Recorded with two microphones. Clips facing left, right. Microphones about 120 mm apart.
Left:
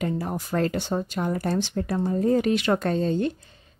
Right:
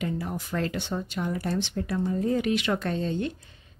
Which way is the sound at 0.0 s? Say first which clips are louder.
Left 3 dB; 40° left (ahead or behind).